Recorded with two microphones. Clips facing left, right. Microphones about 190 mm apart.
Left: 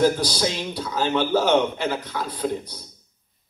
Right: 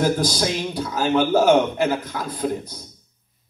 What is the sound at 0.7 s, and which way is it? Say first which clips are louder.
Speech: right 4 dB; 50° right (ahead or behind).